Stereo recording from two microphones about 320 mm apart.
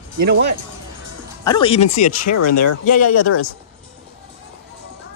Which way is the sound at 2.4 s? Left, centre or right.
Left.